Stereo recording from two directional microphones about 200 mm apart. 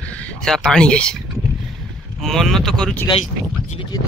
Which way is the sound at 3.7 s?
25° left (ahead or behind).